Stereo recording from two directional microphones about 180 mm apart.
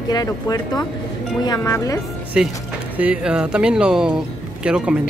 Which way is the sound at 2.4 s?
5° right (ahead or behind).